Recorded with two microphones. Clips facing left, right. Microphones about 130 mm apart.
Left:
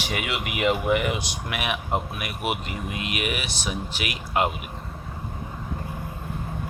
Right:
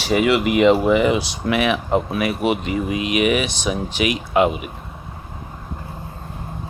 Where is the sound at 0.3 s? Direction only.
90° right.